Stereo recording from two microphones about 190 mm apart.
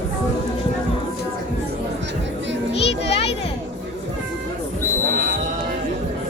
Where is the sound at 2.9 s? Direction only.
30° left (ahead or behind).